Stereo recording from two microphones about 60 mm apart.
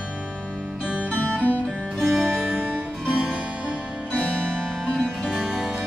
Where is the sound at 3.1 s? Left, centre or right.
Right.